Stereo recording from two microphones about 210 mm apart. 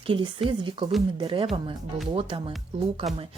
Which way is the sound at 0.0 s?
25° right (ahead or behind).